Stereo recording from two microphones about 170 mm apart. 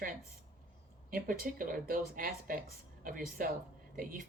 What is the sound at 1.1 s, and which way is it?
Speech, 55° right (ahead or behind).